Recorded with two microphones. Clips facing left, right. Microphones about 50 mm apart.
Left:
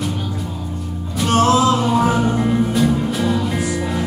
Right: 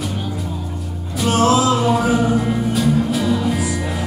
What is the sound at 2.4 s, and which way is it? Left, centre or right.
Music, centre.